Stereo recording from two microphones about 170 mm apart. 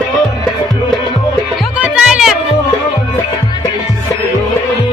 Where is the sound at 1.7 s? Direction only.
5° right (ahead or behind).